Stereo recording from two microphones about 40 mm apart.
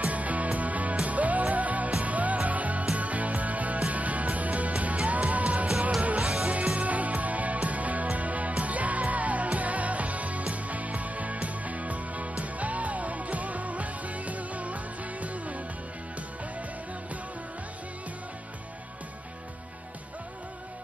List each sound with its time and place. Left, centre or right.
0.0 s music: right